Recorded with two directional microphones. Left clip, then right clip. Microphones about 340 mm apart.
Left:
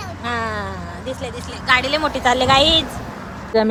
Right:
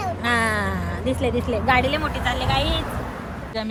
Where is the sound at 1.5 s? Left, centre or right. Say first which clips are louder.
Left 4 dB; centre.